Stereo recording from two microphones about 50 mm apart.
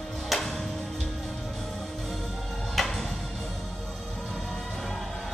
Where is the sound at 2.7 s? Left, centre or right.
Centre.